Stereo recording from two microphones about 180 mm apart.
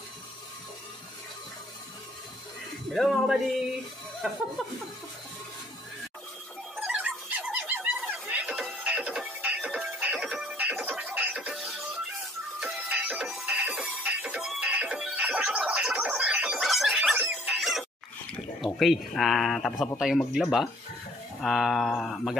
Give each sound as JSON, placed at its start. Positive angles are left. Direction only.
{"t": 2.9, "sound": "speech", "side_deg": 0}
{"t": 4.6, "sound": "speech", "side_deg": 0}
{"t": 6.8, "sound": "a sound", "side_deg": -10}
{"t": 12.5, "sound": "music", "side_deg": -10}
{"t": 18.6, "sound": "speech", "side_deg": 0}